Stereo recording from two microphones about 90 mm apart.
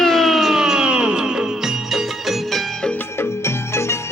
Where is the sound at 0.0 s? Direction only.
5° left (ahead or behind).